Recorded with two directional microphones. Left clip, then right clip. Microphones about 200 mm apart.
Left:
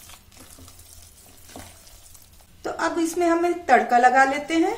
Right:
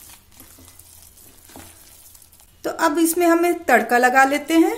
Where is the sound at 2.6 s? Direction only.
50° right (ahead or behind).